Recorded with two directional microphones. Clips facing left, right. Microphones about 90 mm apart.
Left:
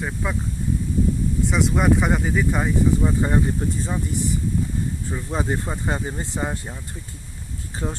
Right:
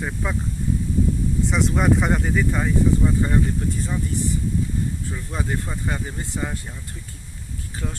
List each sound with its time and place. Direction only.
0.0 s speech: 5° left (ahead or behind)
1.5 s speech: 5° left (ahead or behind); by 4.0 s 20° left (ahead or behind)
5.1 s speech: 25° left (ahead or behind)
7.8 s speech: 25° left (ahead or behind)